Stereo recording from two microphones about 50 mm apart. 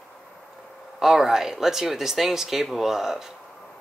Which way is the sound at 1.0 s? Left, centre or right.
Centre.